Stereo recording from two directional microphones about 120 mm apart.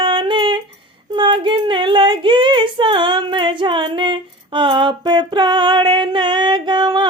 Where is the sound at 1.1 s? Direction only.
40° right (ahead or behind).